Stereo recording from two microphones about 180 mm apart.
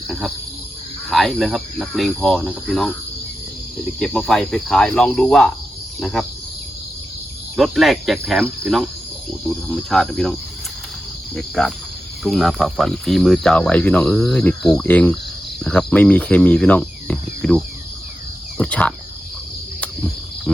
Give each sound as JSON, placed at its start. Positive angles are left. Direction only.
{"t": 0.1, "sound": "speech", "side_deg": 0}
{"t": 4.0, "sound": "speech", "side_deg": 5}
{"t": 7.5, "sound": "speech", "side_deg": 0}
{"t": 11.3, "sound": "speech", "side_deg": 0}
{"t": 15.6, "sound": "cricket", "side_deg": 5}
{"t": 18.5, "sound": "speech", "side_deg": 5}